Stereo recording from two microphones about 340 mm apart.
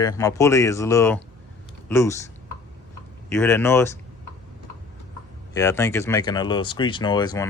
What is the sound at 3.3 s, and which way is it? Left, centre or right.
Speech, centre.